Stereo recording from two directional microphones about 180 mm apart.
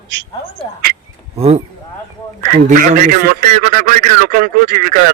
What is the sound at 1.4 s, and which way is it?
Speech, 35° right (ahead or behind).